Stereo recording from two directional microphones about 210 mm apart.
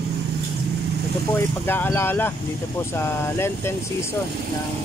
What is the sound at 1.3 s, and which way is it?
Speech, 10° left (ahead or behind).